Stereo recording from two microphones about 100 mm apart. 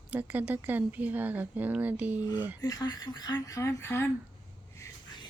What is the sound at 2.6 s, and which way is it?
Speech, 40° left (ahead or behind).